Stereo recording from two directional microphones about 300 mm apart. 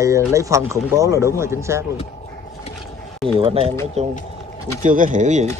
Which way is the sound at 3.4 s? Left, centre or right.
Centre.